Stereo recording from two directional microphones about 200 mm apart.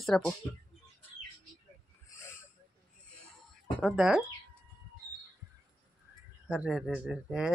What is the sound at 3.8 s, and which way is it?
Speech, centre (ahead or behind).